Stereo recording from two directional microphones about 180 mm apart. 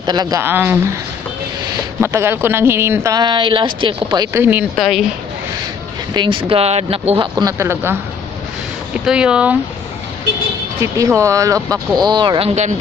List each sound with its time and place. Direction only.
0.0 s speech: 20° right (ahead or behind)
2.0 s speech: 15° right (ahead or behind)
4.7 s speech: centre (ahead or behind)
6.1 s speech: 25° right (ahead or behind); by 9.6 s 5° right (ahead or behind)
10.8 s speech: 15° right (ahead or behind)